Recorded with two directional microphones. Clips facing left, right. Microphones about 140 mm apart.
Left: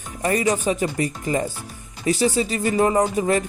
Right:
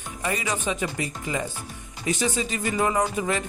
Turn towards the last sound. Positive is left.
turn(degrees=35)  # may be behind; listen again after turning